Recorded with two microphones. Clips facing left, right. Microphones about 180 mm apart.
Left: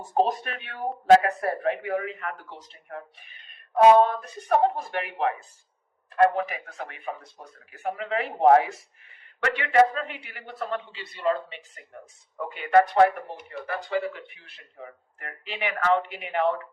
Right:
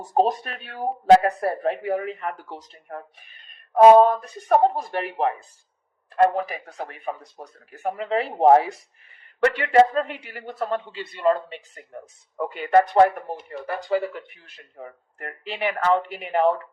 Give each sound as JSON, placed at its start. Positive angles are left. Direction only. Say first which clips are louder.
{"t": 0.1, "sound": "speech", "louder": "right 3 dB", "side_deg": -35}